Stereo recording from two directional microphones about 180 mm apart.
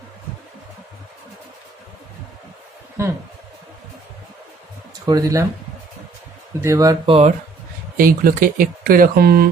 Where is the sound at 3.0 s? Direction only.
15° right (ahead or behind).